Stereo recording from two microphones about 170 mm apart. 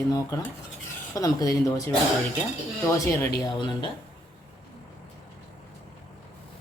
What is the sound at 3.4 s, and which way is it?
Speech, 30° left (ahead or behind).